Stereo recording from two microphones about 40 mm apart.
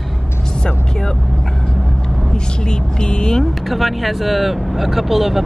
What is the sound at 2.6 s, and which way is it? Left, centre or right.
Speech, left.